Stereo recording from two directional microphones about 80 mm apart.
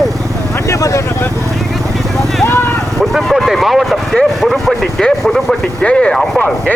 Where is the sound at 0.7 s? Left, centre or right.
Left.